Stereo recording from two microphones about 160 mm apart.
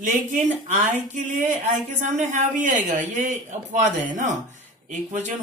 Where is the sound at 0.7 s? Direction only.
50° right (ahead or behind).